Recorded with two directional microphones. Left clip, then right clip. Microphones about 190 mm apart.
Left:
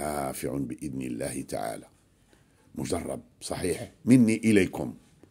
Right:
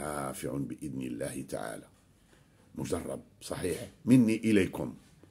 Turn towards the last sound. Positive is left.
turn(degrees=30)  # may be behind; listen again after turning